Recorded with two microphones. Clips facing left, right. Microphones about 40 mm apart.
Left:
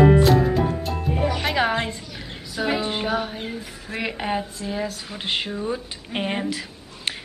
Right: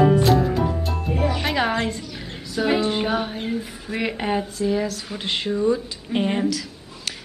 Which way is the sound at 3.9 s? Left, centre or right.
Centre.